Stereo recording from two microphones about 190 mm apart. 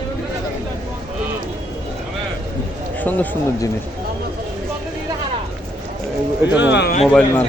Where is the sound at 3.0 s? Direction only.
10° left (ahead or behind).